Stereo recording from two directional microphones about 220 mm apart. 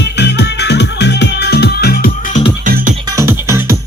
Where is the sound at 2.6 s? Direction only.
35° right (ahead or behind).